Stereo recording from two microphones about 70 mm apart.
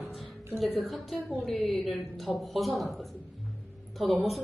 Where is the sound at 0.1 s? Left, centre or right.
Centre.